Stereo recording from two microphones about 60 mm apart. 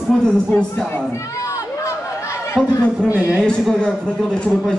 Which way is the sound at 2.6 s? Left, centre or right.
Centre.